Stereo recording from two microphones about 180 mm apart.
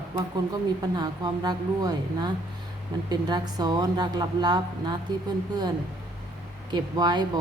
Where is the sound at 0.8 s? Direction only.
25° right (ahead or behind).